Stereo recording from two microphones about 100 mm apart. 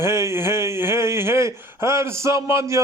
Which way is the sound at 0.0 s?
25° right (ahead or behind).